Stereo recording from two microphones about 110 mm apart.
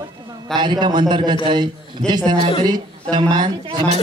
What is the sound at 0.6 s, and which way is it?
A man's voice, 45° right (ahead or behind).